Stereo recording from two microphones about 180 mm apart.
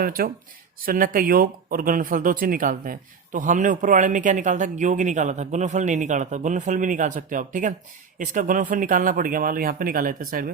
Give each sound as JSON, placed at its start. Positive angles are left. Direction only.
{"t": 0.0, "sound": "speech", "side_deg": -55}